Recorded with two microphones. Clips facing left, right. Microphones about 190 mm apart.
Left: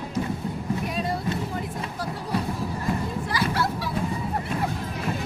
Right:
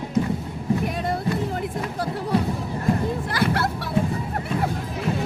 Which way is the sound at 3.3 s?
60° right (ahead or behind).